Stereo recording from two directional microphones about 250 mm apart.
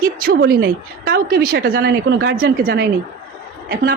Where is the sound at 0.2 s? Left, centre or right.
Right.